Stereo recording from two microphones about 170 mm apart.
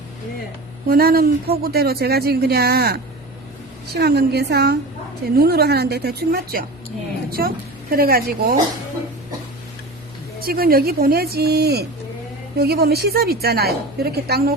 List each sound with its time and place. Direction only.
0.9 s a woman's voice: 60° right (ahead or behind)
10.4 s a woman's voice: 60° right (ahead or behind)